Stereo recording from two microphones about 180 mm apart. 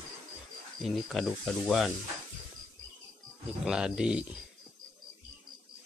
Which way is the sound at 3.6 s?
5° right (ahead or behind).